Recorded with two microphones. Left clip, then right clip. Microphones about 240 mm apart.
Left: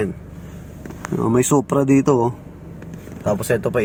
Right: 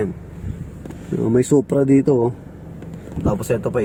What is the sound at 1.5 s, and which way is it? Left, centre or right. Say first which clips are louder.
Speech: right 3 dB; left.